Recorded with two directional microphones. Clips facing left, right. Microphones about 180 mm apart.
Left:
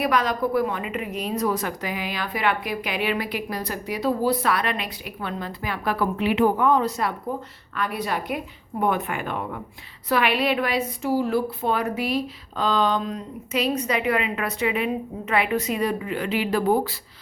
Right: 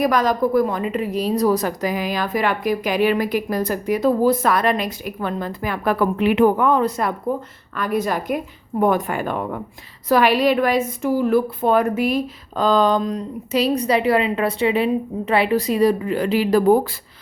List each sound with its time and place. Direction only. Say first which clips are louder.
0.0 s a woman's voice: right 5 dB; 40° right (ahead or behind)
7.8 s a woman's voice: right 5 dB; 45° right (ahead or behind)